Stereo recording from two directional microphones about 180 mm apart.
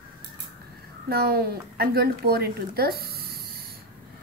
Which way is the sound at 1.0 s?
60° right (ahead or behind).